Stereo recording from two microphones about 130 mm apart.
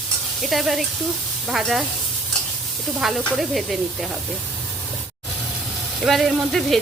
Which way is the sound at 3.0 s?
Centre (ahead or behind).